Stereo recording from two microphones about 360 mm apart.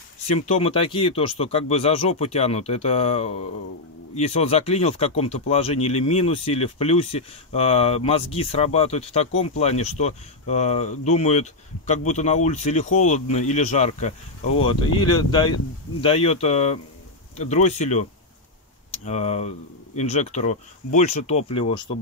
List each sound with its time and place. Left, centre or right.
0.5 s speech: centre
19.0 s speech: centre